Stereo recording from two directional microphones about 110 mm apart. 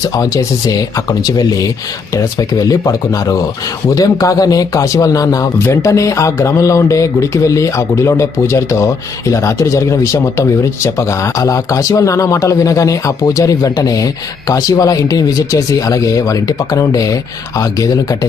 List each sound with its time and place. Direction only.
0.0 s speech: 35° left (ahead or behind)